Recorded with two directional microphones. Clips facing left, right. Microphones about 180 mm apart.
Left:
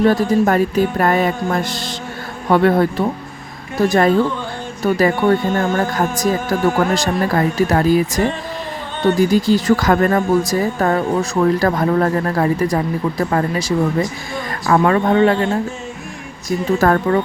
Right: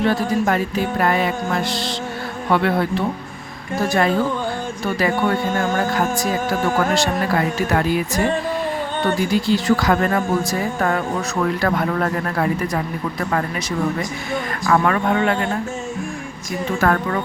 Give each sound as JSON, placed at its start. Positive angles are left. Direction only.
{"t": 0.0, "sound": "music", "side_deg": 45}
{"t": 4.9, "sound": "speech", "side_deg": 45}
{"t": 9.1, "sound": "music", "side_deg": 40}
{"t": 11.6, "sound": "speech", "side_deg": 35}
{"t": 16.7, "sound": "speech", "side_deg": 35}